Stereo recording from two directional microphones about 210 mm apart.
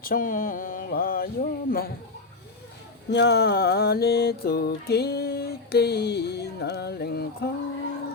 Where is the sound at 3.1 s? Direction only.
55° left (ahead or behind).